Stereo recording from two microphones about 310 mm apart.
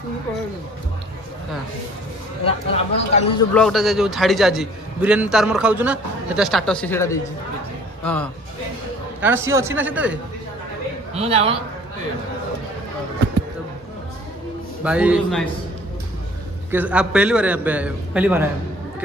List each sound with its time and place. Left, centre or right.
2.4 s speech: centre
3.5 s a man's voice: centre
9.2 s a man's voice: centre
11.1 s a man's voice: centre
14.8 s a man's voice: centre
16.7 s a man's voice: centre